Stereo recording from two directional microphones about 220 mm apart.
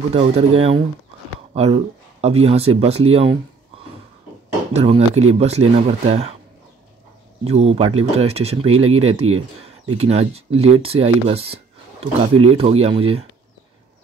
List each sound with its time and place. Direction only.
0.1 s speech: 25° right (ahead or behind)
4.7 s speech: 30° right (ahead or behind)
7.4 s speech: 30° right (ahead or behind)